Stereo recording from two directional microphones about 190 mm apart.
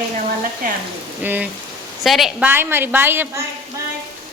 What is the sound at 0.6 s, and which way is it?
Speech, 50° right (ahead or behind).